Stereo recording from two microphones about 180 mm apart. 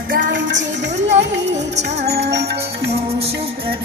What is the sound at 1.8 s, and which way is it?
Music, 60° right (ahead or behind).